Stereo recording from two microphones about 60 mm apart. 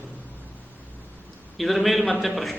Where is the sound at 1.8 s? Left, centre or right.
Centre.